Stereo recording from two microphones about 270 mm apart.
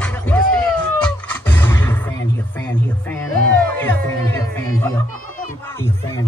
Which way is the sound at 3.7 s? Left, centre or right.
Centre.